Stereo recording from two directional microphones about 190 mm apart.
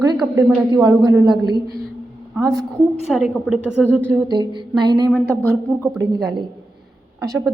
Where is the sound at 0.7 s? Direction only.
20° right (ahead or behind).